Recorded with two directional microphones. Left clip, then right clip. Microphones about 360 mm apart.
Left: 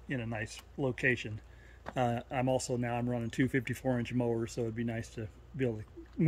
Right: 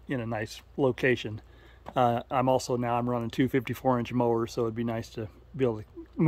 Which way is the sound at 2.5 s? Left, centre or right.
Right.